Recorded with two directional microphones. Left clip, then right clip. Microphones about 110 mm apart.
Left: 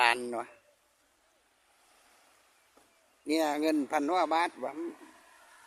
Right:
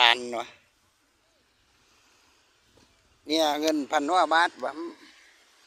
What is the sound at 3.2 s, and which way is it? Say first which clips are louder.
A man's voice: right 5 dB; 20° left (ahead or behind).